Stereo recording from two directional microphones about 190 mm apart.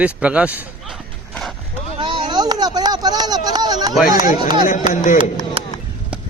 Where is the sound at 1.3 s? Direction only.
5° left (ahead or behind).